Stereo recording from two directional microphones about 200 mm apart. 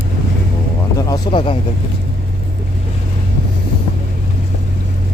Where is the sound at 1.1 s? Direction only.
25° left (ahead or behind).